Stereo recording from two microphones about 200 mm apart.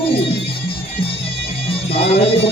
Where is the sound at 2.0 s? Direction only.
30° left (ahead or behind).